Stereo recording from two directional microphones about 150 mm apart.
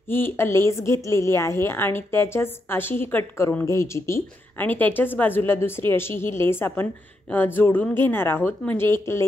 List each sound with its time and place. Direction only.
0.1 s a woman's voice: 15° left (ahead or behind)